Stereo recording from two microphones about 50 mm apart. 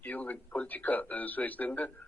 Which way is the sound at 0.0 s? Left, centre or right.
Left.